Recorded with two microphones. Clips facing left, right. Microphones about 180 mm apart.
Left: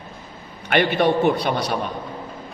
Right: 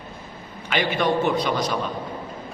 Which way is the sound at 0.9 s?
60° left (ahead or behind).